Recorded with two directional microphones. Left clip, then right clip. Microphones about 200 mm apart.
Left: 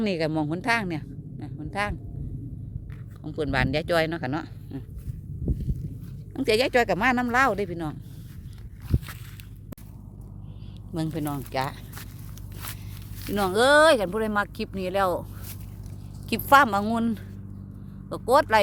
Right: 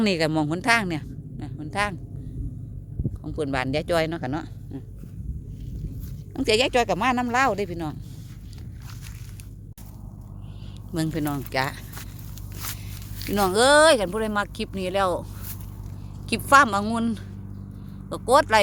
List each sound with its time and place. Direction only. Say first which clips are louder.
0.0 s speech: right 3 dB; 10° right (ahead or behind)
3.2 s speech: left 1 dB; 5° right (ahead or behind)
6.3 s speech: right 1 dB; centre (ahead or behind)
8.9 s biting: left 14 dB; 20° left (ahead or behind)
10.9 s speech: right 3 dB; 10° right (ahead or behind)
13.3 s speech: right 2 dB; 5° right (ahead or behind)
16.3 s a woman's voice: right 1 dB; 10° left (ahead or behind)